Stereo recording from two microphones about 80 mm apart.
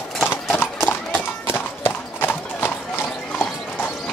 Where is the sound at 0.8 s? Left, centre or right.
Left.